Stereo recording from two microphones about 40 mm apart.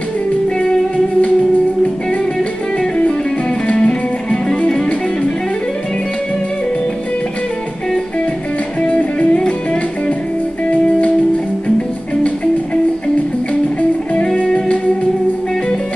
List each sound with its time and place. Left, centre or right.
3.6 s music: left